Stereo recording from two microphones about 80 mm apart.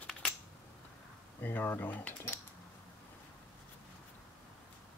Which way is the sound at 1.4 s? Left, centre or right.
Left.